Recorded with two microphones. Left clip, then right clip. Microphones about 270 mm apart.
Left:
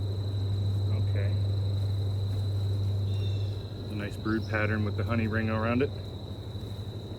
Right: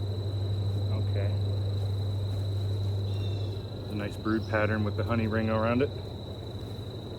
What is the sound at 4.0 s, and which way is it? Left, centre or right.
Speech, centre.